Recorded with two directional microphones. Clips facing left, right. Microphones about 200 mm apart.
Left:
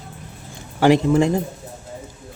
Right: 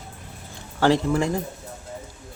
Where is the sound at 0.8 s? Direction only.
15° left (ahead or behind).